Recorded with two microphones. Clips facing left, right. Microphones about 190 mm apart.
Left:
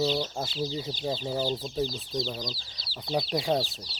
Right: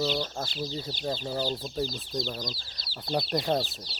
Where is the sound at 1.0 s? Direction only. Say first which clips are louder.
Left 1 dB; 10° left (ahead or behind).